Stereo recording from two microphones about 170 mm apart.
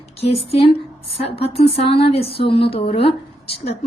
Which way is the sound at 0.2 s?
35° left (ahead or behind).